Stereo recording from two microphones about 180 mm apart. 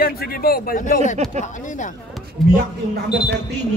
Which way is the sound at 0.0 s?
55° left (ahead or behind).